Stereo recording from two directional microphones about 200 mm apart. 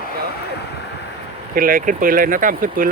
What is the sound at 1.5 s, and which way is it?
Speech, 45° right (ahead or behind).